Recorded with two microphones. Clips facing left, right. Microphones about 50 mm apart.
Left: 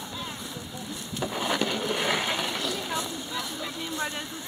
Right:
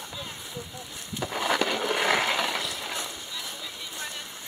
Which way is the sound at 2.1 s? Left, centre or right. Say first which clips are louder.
Right 3 dB; right.